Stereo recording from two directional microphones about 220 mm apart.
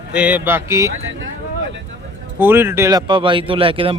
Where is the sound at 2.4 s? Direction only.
10° right (ahead or behind).